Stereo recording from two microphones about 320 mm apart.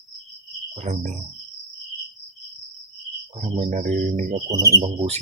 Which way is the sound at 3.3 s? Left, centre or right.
Centre.